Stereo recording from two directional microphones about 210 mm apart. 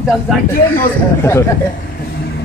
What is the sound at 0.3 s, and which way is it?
Speech, centre (ahead or behind).